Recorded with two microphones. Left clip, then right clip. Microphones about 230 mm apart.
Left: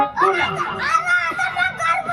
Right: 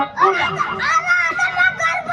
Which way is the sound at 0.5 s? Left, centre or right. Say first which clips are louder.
Right 2 dB; centre.